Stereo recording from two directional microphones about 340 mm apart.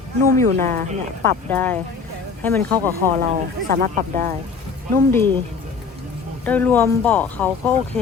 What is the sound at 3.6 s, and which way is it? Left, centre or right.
Speech, right.